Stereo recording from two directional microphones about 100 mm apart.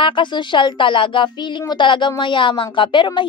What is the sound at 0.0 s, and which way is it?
A woman's voice, 55° left (ahead or behind).